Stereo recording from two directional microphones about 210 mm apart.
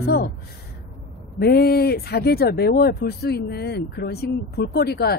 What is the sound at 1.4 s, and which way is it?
A woman's voice, 50° left (ahead or behind).